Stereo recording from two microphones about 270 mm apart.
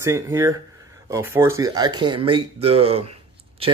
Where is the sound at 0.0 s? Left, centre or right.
Centre.